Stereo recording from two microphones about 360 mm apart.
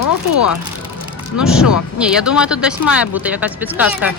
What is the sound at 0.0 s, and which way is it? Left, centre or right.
Speech, left.